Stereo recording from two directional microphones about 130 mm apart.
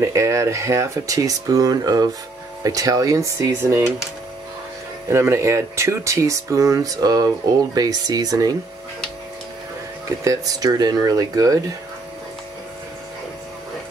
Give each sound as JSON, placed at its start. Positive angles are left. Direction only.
{"t": 0.0, "sound": "speech", "side_deg": -25}
{"t": 5.1, "sound": "speech", "side_deg": -20}
{"t": 10.2, "sound": "speech", "side_deg": -25}